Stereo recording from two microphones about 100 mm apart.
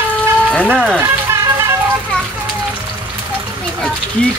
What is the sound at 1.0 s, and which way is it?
Music, 25° right (ahead or behind).